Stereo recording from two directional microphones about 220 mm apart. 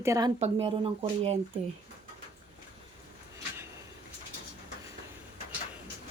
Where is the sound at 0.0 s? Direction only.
15° right (ahead or behind).